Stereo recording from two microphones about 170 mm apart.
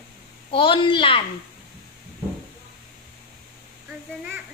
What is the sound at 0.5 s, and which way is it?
Speech, 30° left (ahead or behind).